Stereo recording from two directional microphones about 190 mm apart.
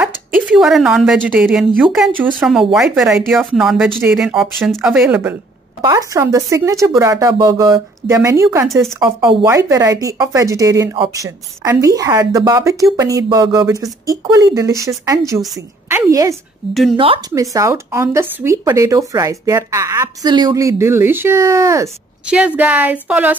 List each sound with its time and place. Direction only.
0.0 s a woman's voice: centre (ahead or behind)
5.8 s a woman's voice: 20° right (ahead or behind)
16.9 s speech: 30° right (ahead or behind)
17.3 s speech: 15° right (ahead or behind)